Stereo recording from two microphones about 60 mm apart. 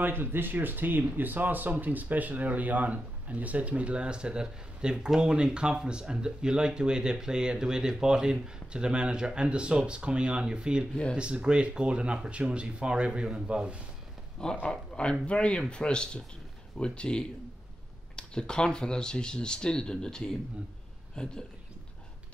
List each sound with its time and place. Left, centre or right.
0.0 s speech: right; by 13.8 s centre
14.6 s speech: centre